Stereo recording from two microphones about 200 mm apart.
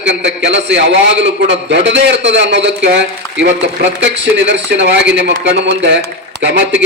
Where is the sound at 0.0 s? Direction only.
60° right (ahead or behind).